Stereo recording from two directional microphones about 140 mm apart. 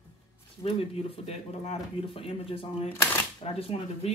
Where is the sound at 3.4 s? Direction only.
45° left (ahead or behind).